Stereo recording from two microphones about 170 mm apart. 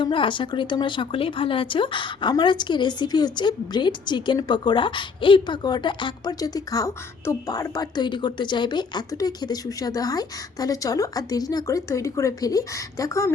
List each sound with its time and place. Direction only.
0.0 s speech: 30° left (ahead or behind)